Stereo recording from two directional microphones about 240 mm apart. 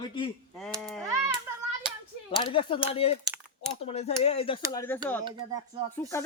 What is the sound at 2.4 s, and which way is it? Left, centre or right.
Speech, left.